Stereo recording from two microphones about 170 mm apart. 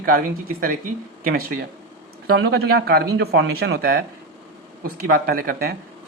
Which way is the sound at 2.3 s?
85° right.